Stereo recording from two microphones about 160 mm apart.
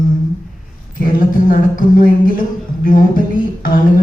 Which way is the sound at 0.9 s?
60° left (ahead or behind).